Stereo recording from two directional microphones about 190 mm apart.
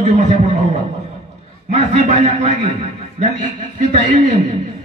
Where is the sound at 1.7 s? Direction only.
35° right (ahead or behind).